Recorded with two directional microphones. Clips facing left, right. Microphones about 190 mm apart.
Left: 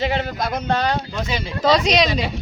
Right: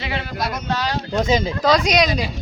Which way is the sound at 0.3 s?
55° left (ahead or behind).